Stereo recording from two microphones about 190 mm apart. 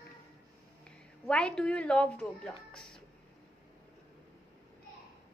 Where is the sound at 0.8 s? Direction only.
5° left (ahead or behind).